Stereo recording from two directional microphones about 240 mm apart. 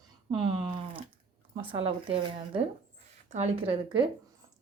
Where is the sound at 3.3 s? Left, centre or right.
Right.